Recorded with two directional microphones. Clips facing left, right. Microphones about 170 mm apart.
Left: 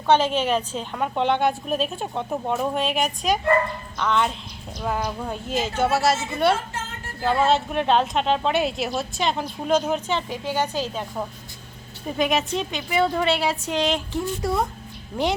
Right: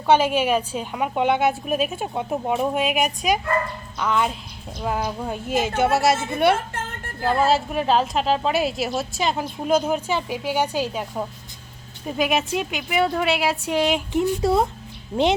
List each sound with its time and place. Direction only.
0.1 s a woman's voice: 10° right (ahead or behind)
7.2 s a woman's voice: centre (ahead or behind); by 15.3 s 20° right (ahead or behind)